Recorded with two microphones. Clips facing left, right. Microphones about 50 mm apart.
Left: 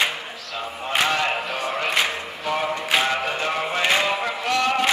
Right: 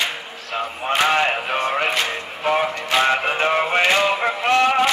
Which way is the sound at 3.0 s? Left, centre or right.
Right.